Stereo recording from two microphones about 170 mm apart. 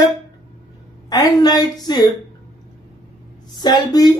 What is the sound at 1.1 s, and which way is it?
Speech, 25° left (ahead or behind).